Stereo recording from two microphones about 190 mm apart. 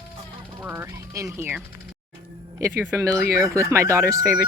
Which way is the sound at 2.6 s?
15° right (ahead or behind).